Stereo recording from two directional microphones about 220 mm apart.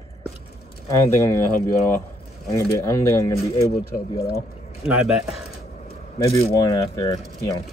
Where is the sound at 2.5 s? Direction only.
15° left (ahead or behind).